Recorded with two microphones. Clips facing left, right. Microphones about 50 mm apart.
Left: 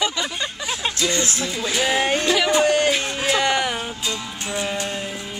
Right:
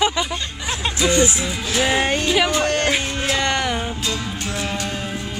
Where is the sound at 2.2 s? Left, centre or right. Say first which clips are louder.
Right 1 dB; centre.